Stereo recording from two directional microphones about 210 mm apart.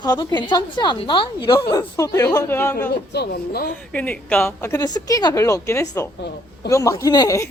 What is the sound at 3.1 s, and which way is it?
Speech, 50° left (ahead or behind).